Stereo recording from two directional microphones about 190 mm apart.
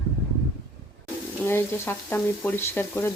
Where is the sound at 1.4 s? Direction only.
10° left (ahead or behind).